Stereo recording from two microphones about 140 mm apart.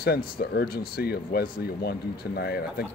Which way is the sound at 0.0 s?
90° left.